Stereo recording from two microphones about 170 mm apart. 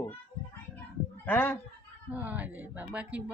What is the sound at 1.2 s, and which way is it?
Speech, 10° left (ahead or behind).